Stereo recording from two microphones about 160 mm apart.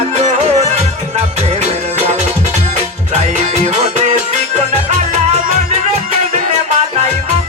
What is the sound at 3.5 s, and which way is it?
Music, 45° right (ahead or behind).